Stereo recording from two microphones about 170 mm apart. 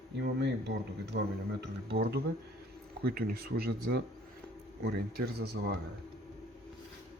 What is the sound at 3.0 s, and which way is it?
Speech, 60° right (ahead or behind).